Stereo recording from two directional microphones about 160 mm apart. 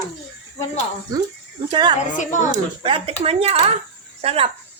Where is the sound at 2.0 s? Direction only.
50° left (ahead or behind).